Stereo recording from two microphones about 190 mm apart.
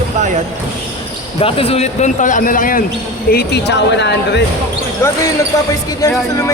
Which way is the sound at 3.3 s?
60° left (ahead or behind).